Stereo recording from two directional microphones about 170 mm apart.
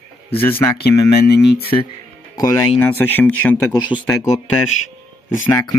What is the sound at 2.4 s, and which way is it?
Speech, 15° left (ahead or behind).